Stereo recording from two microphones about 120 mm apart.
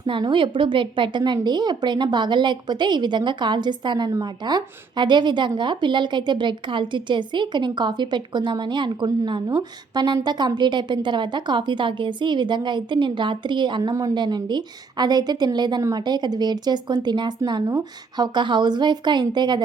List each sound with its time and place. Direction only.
0.0 s a woman's voice: 40° right (ahead or behind)